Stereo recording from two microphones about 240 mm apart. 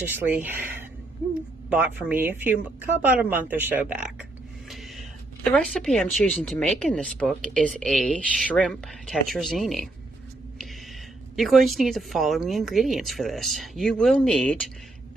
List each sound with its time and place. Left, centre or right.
0.0 s speech: centre
1.7 s speech: centre
4.7 s a sound: centre
5.5 s speech: centre
11.3 s speech: centre